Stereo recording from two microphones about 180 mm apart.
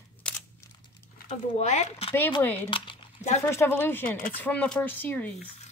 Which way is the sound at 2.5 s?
30° left (ahead or behind).